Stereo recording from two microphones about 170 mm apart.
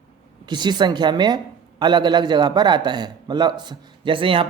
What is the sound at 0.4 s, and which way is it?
Speech, 25° right (ahead or behind).